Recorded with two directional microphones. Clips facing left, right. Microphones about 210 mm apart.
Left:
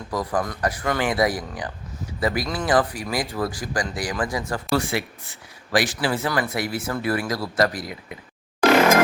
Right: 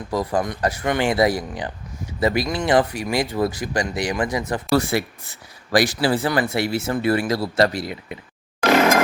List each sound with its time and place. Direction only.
0.1 s speech: 25° right (ahead or behind)
4.7 s speech: 40° right (ahead or behind)